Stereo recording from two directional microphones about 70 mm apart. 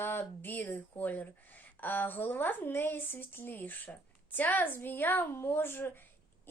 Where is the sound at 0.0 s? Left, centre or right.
Left.